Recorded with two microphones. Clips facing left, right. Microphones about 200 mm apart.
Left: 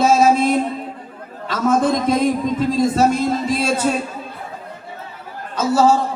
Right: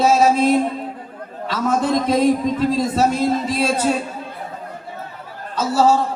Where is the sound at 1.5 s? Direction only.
50° left (ahead or behind).